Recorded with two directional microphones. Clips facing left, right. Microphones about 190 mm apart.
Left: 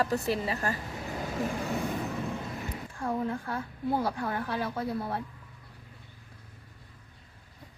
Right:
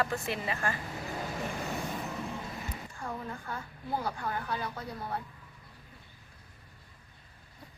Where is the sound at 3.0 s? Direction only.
60° left (ahead or behind).